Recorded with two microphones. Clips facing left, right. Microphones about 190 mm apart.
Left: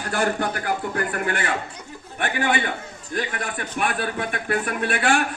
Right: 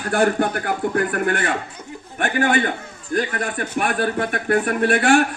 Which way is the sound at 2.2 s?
45° right (ahead or behind).